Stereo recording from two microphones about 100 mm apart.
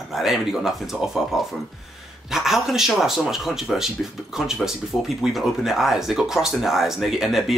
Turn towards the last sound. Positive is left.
turn(degrees=0)  # may be behind; listen again after turning